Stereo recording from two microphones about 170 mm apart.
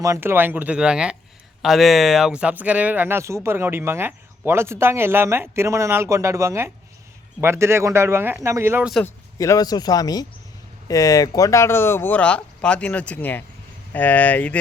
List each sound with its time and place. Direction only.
0.0 s speech: 15° right (ahead or behind)
9.0 s speech: 20° left (ahead or behind)